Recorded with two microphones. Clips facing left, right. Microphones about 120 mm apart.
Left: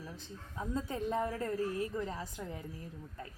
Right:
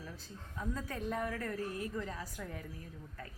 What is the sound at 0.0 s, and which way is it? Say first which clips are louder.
A woman's voice: left 2 dB; 20° left (ahead or behind).